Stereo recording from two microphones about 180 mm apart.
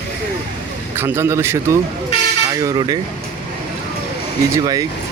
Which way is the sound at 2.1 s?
35° left (ahead or behind).